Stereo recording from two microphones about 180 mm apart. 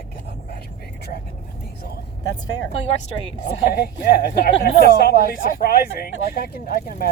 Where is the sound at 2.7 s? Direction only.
35° left (ahead or behind).